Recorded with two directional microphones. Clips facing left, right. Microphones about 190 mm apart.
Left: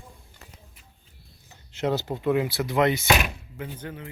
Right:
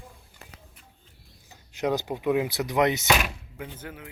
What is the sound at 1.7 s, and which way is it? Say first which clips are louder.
Speech: even; 15° right (ahead or behind).